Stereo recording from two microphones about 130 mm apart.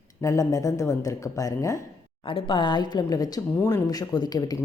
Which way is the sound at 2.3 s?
40° left (ahead or behind).